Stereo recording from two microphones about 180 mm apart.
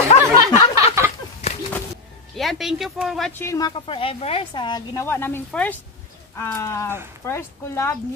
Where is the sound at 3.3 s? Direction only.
15° left (ahead or behind).